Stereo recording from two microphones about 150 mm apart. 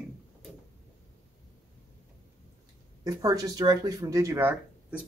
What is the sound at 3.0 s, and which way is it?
Speech, 25° right (ahead or behind).